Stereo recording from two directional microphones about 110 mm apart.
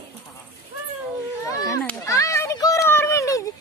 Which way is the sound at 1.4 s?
30° left (ahead or behind).